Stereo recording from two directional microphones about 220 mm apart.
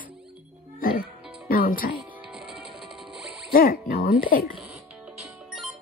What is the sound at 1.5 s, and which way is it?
Music, 40° left (ahead or behind).